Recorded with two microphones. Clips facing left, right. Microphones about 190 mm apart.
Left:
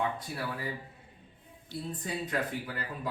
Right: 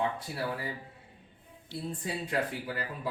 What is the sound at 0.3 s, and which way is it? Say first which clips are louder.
Speech: right 1 dB; 20° right (ahead or behind).